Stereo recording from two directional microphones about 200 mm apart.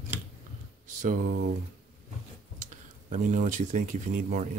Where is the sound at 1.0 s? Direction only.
45° right (ahead or behind).